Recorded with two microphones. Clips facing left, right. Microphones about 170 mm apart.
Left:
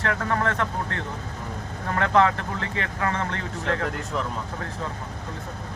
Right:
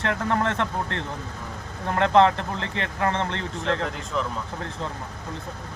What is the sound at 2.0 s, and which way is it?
Speech, 25° right (ahead or behind).